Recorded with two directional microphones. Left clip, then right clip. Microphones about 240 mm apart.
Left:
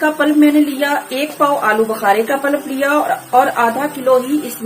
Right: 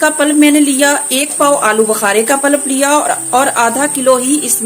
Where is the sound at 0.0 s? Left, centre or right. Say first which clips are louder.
Right 3 dB; right.